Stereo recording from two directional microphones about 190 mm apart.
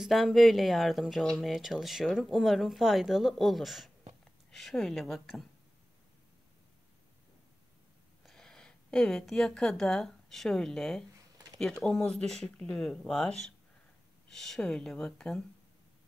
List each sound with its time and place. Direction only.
0.0 s speech: centre (ahead or behind)
8.2 s a woman's voice: centre (ahead or behind)
11.1 s a sound: 20° right (ahead or behind)
11.8 s speech: 5° left (ahead or behind)